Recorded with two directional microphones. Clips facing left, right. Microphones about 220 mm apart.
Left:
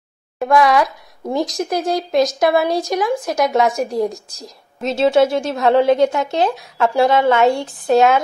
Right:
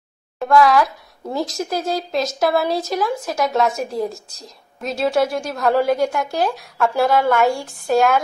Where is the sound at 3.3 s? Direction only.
Centre (ahead or behind).